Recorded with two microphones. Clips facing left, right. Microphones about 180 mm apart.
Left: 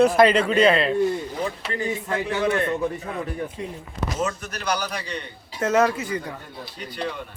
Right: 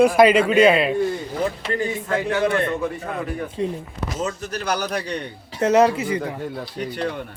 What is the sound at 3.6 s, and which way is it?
Speech, 30° right (ahead or behind).